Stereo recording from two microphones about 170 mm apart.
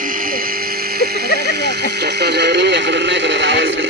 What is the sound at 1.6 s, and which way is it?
Speech, 75° right (ahead or behind).